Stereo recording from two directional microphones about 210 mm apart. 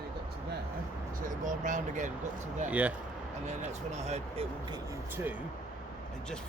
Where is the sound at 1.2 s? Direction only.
40° right (ahead or behind).